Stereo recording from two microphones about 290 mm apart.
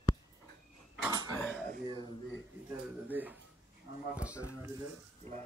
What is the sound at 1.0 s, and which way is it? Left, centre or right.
Cutlery, centre.